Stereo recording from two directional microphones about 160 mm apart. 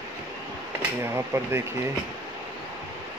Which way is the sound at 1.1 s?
15° right (ahead or behind).